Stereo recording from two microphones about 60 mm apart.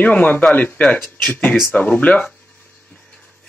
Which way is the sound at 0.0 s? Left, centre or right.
Left.